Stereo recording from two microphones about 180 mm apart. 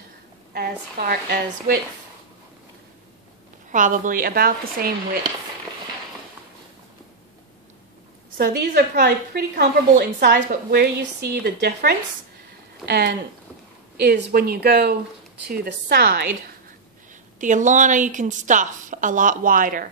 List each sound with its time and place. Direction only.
0.5 s a woman's voice: 60° right (ahead or behind)
3.7 s a woman's voice: 45° right (ahead or behind)
8.4 s a woman's voice: 65° right (ahead or behind)
17.4 s a woman's voice: 45° right (ahead or behind)